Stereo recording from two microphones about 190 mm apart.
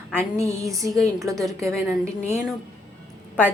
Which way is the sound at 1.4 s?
Centre (ahead or behind).